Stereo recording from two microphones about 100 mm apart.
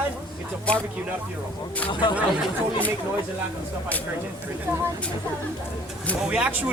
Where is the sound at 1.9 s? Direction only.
50° left (ahead or behind).